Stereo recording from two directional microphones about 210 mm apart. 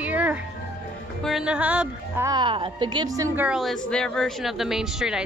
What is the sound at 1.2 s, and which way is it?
Speech, 5° right (ahead or behind).